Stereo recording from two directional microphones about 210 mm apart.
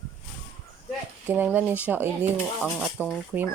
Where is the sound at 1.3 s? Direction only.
10° right (ahead or behind).